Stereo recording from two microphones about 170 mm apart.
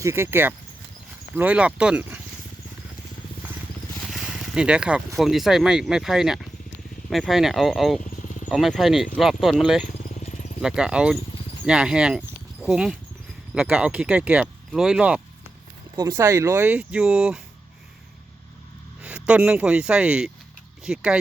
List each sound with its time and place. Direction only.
0.0 s speech: 15° right (ahead or behind)
4.0 s speech: 5° right (ahead or behind)
10.1 s a sound: 45° left (ahead or behind)
10.6 s speech: 5° right (ahead or behind)
16.0 s speech: 20° right (ahead or behind)
19.0 s speech: 10° right (ahead or behind)